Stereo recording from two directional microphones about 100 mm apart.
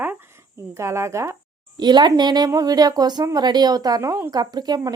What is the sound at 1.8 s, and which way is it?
A woman's voice, 45° right (ahead or behind).